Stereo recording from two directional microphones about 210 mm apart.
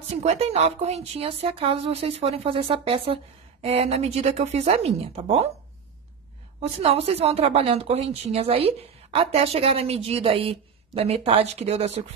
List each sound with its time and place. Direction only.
0.2 s a woman's voice: 30° right (ahead or behind)
6.8 s a woman's voice: 30° right (ahead or behind)